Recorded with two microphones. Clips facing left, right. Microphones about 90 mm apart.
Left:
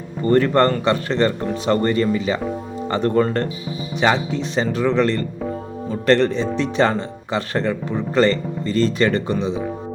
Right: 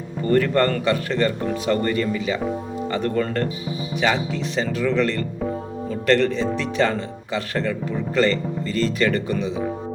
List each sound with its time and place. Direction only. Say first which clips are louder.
0.3 s speech: left 3 dB; 30° left (ahead or behind)